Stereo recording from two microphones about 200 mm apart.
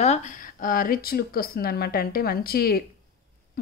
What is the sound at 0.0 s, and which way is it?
A woman's voice, 35° left (ahead or behind).